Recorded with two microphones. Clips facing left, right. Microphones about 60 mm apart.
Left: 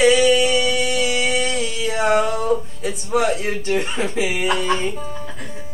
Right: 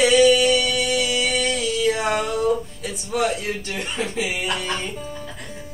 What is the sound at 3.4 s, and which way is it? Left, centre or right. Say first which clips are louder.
Speech: left 6 dB; left.